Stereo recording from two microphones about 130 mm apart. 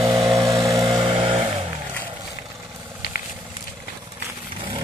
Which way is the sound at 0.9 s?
35° right (ahead or behind).